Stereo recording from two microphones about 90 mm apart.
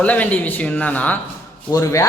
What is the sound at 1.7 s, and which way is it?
Speech, 35° left (ahead or behind).